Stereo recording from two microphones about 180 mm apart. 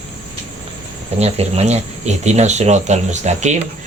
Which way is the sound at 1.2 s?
35° right (ahead or behind).